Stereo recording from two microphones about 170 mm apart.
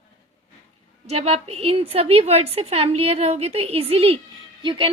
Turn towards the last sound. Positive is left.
turn(degrees=-30)  # may be behind; listen again after turning